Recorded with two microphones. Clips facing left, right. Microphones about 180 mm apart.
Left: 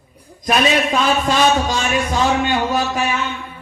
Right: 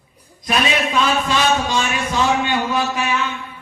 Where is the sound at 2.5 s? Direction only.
45° left (ahead or behind).